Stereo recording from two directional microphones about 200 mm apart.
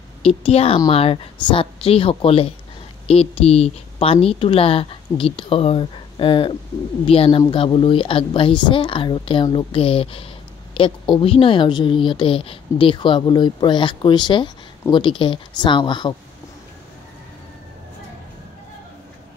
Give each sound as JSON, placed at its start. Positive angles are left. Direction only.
{"t": 0.2, "sound": "a woman's voice", "side_deg": 30}